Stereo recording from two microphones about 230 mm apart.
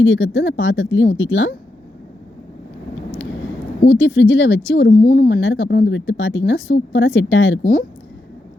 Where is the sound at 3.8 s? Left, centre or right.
Left.